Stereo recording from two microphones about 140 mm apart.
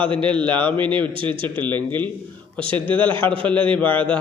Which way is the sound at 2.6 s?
40° right (ahead or behind).